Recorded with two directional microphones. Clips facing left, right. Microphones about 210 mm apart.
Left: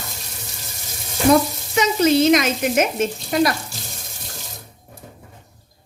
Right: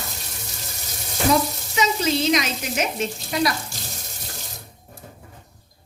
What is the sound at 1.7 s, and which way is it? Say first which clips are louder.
Frying: left 6 dB; 55° left (ahead or behind).